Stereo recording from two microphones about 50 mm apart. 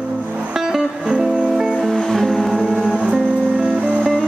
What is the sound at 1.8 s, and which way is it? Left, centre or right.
Music, centre.